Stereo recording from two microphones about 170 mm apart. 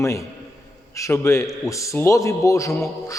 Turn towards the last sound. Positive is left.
turn(degrees=20)  # may be behind; listen again after turning